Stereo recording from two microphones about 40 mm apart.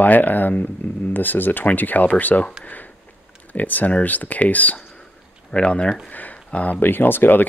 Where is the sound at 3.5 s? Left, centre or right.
Left.